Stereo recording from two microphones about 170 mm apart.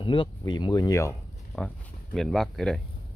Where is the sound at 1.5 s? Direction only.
Centre (ahead or behind).